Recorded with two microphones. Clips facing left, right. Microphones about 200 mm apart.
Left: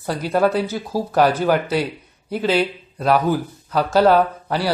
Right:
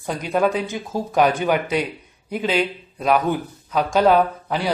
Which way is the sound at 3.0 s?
5° left (ahead or behind).